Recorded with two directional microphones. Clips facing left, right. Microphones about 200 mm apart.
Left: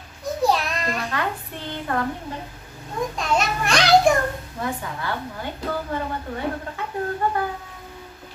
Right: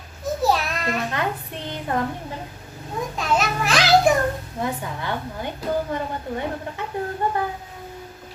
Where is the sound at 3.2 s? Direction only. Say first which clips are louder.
Right 2 dB; centre (ahead or behind).